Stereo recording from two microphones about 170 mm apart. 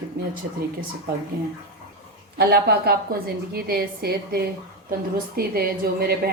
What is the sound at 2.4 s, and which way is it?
A woman's voice, 70° right (ahead or behind).